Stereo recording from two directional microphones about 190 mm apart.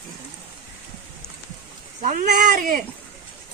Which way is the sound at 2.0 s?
45° right (ahead or behind).